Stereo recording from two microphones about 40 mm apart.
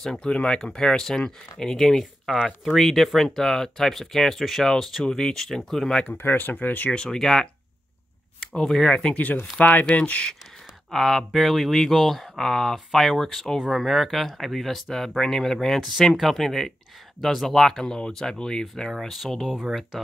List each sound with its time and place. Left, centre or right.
0.2 s speech: left
6.1 s speech: left
6.6 s speech: left
6.9 s speech: centre
9.1 s speech: left
10.9 s speech: centre
13.6 s speech: centre
13.8 s speech: centre
18.9 s speech: centre